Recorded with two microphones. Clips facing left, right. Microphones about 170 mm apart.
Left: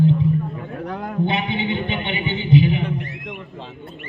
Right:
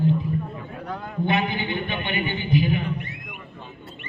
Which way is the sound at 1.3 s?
25° left (ahead or behind).